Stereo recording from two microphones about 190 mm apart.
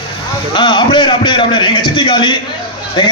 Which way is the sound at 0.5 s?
25° left (ahead or behind).